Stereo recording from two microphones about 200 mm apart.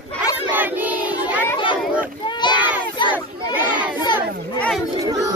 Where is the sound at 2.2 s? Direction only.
20° left (ahead or behind).